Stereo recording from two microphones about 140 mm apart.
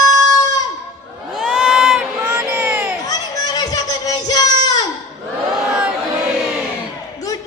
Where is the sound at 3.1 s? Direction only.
30° left (ahead or behind).